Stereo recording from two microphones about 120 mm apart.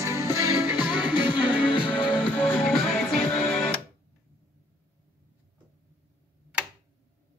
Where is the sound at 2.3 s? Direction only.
15° left (ahead or behind).